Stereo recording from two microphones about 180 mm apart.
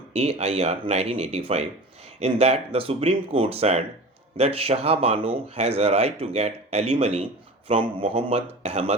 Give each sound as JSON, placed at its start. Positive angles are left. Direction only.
{"t": 0.1, "sound": "speech", "side_deg": -35}